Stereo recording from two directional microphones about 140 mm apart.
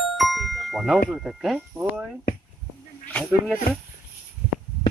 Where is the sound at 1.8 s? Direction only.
15° right (ahead or behind).